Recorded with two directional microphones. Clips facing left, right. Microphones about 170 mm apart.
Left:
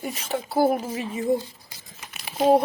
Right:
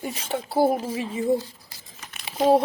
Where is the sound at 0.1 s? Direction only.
30° right (ahead or behind).